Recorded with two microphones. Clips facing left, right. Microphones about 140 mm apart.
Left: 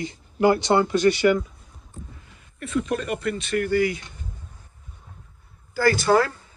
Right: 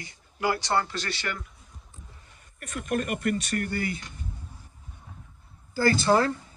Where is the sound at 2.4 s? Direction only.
45° right (ahead or behind).